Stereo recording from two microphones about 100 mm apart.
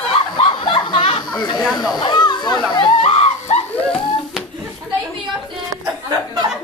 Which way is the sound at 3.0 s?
90° left.